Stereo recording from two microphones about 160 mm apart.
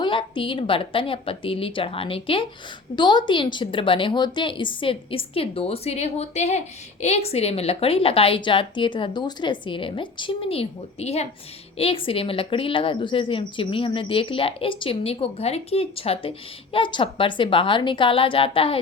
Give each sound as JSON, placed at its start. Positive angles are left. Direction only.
{"t": 0.0, "sound": "a woman's voice", "side_deg": 30}